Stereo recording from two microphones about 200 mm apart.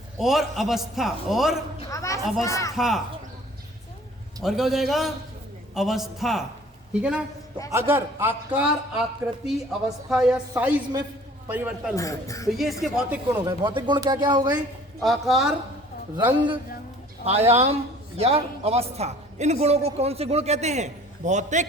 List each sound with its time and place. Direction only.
0.2 s a man's voice: centre (ahead or behind)
1.9 s a sound: 15° left (ahead or behind)
2.4 s a woman's voice: 15° left (ahead or behind)
2.7 s a man's voice: centre (ahead or behind)
4.4 s a man's voice: centre (ahead or behind)
10.1 s a man's voice: 5° right (ahead or behind)
11.9 s a woman's voice: 15° left (ahead or behind)
12.5 s a man's voice: centre (ahead or behind)
13.4 s speech: 20° right (ahead or behind)
15.0 s a man's voice: centre (ahead or behind)
16.1 s a man's voice: 20° right (ahead or behind)